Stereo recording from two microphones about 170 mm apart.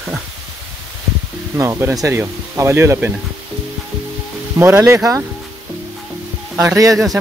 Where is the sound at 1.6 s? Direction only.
15° right (ahead or behind).